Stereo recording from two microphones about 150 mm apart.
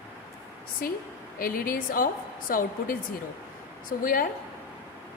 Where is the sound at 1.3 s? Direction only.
70° left (ahead or behind).